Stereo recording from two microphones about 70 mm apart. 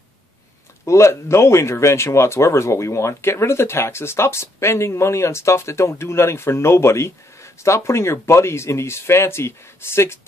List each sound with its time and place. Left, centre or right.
0.8 s speech: left